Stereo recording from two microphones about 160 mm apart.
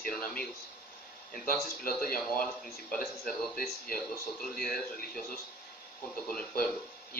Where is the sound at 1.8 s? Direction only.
65° left (ahead or behind).